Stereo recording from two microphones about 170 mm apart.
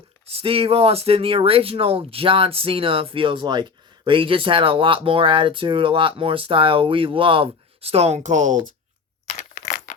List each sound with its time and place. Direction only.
0.3 s speech: 35° right (ahead or behind)
9.6 s crumpling: 55° left (ahead or behind)